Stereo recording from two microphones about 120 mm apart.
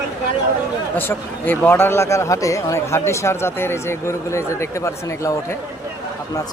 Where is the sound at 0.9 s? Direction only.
15° left (ahead or behind).